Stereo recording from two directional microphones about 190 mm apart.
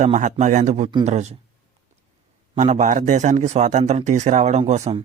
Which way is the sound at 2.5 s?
40° right (ahead or behind).